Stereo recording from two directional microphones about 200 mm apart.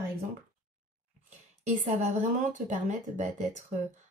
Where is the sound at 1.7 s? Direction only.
35° right (ahead or behind).